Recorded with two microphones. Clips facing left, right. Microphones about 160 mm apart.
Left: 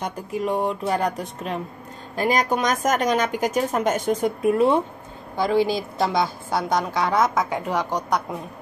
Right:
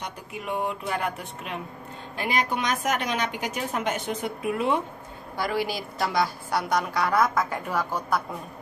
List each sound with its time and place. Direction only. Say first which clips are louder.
0.0 s speech: left 9 dB; 35° left (ahead or behind)
5.4 s a woman's voice: left 7 dB; 25° left (ahead or behind)